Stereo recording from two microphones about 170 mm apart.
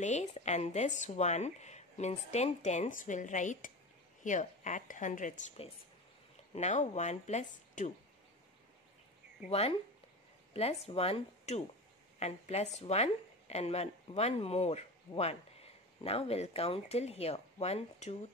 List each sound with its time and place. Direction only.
0.0 s speech: 45° left (ahead or behind)
9.5 s a woman's voice: 35° left (ahead or behind)